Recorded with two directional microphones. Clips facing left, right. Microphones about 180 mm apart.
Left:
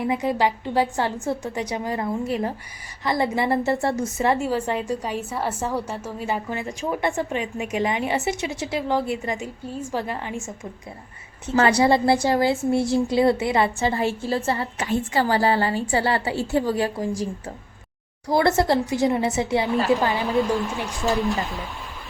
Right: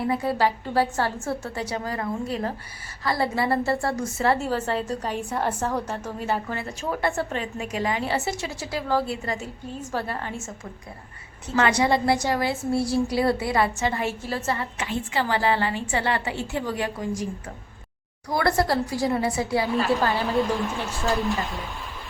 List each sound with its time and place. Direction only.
0.1 s a woman's voice: 15° left (ahead or behind)
11.5 s a woman's voice: 35° left (ahead or behind)
18.3 s a woman's voice: 25° left (ahead or behind)